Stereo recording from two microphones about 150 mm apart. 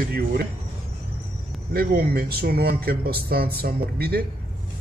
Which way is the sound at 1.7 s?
90° right.